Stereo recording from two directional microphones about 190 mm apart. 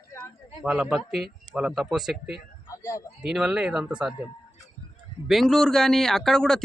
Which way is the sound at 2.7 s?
20° left (ahead or behind).